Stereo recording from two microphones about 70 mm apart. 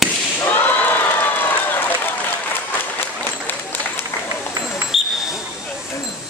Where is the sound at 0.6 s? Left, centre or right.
Left.